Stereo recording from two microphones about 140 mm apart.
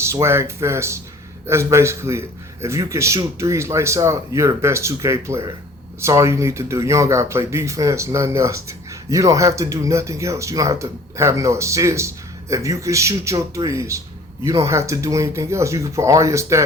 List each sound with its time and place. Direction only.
0.0 s speech: 20° right (ahead or behind)